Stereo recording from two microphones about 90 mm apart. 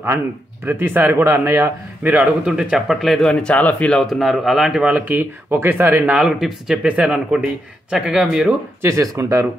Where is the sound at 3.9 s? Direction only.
Centre (ahead or behind).